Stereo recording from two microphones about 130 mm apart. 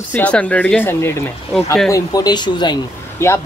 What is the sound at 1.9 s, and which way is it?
Speech, 30° left (ahead or behind).